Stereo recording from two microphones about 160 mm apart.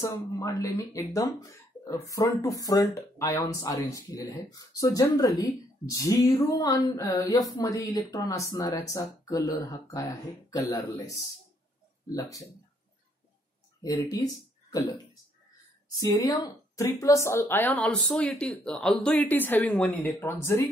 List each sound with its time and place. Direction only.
0.0 s speech: 20° left (ahead or behind)
16.0 s a woman's voice: 25° left (ahead or behind)